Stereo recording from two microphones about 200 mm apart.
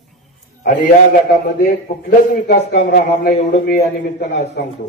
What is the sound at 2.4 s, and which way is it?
Speech, 50° left (ahead or behind).